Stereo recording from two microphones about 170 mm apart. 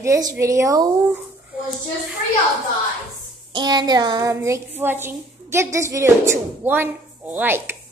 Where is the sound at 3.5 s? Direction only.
25° right (ahead or behind).